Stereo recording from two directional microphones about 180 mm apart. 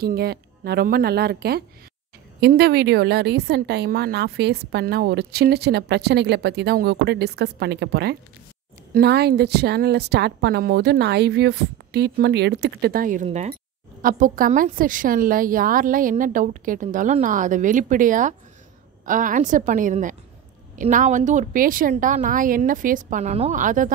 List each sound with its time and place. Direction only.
0.0 s a woman's voice: 60° right (ahead or behind); by 13.6 s 40° right (ahead or behind)
14.0 s a woman's voice: 50° right (ahead or behind)